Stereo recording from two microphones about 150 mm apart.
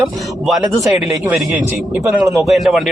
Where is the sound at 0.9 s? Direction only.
10° right (ahead or behind).